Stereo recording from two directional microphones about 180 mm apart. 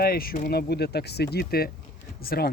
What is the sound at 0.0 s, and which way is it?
Speech, 55° left (ahead or behind).